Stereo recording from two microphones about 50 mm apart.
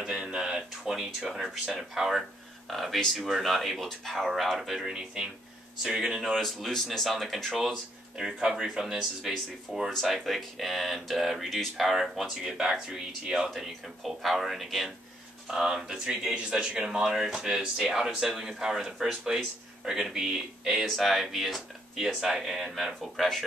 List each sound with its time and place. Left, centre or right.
0.1 s a sound: centre
0.6 s speech: centre
2.7 s speech: centre
4.9 s speech: centre
6.3 s speech: centre
8.3 s speech: centre
9.7 s speech: centre
10.0 s speech: centre
20.8 s speech: centre
22.2 s speech: centre